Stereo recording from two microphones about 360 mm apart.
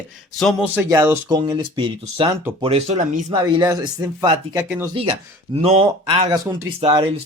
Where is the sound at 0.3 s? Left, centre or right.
Centre.